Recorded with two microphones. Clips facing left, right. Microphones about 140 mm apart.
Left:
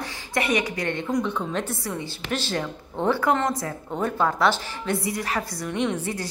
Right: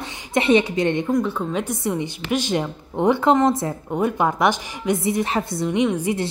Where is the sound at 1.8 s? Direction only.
20° right (ahead or behind).